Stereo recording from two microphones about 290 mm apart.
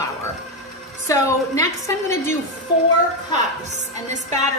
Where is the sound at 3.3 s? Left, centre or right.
Right.